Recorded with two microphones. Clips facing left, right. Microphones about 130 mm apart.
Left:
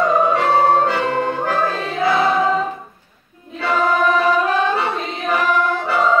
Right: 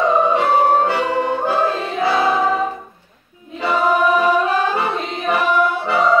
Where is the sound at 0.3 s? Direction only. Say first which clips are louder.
Even; 15° right (ahead or behind).